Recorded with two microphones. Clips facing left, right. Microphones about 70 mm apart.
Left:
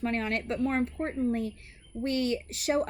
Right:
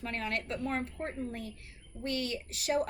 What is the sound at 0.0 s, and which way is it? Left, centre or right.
A woman's voice, left.